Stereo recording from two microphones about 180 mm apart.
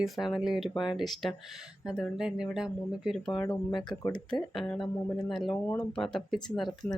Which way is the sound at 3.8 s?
20° left (ahead or behind).